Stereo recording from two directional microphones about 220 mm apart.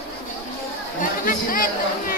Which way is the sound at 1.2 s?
40° left (ahead or behind).